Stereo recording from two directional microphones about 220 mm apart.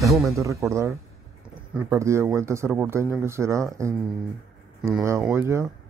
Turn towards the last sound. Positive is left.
turn(degrees=-10)  # may be behind; listen again after turning